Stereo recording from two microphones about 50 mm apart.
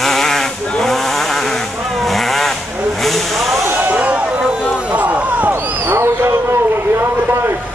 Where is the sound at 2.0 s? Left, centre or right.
Centre.